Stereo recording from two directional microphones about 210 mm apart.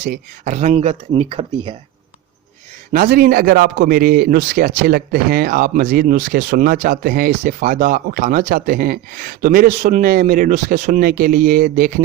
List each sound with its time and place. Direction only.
0.0 s speech: 35° right (ahead or behind)
2.9 s a man's voice: 40° right (ahead or behind)